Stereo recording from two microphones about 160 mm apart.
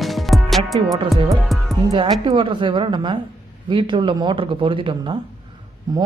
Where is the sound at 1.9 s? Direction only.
30° right (ahead or behind).